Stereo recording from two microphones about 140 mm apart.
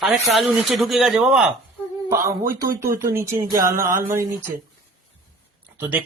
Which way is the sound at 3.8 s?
80° right.